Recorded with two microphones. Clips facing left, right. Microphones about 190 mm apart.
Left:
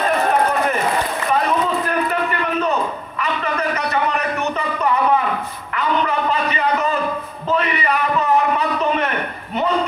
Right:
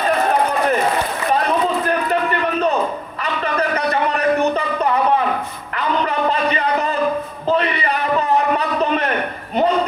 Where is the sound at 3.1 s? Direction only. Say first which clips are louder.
Even; 35° right (ahead or behind).